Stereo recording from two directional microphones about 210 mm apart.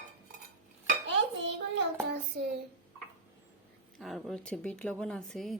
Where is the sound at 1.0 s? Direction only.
60° right (ahead or behind).